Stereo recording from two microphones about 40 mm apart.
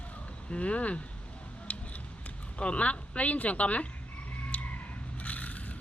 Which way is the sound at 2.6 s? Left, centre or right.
Left.